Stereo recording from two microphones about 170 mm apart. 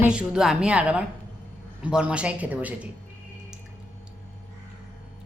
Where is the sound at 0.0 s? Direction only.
5° right (ahead or behind).